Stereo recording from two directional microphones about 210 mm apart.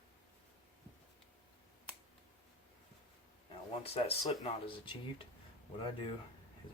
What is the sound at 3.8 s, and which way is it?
Speech, 25° left (ahead or behind).